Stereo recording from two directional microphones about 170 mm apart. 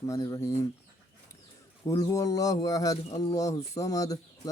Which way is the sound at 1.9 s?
20° left (ahead or behind).